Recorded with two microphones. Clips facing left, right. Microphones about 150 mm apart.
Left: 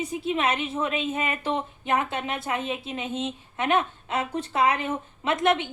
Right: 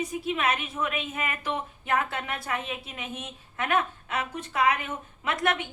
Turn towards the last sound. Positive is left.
turn(degrees=25)  # may be behind; listen again after turning